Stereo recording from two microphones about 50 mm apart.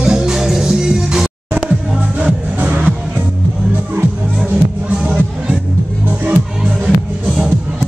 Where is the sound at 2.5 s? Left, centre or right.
Right.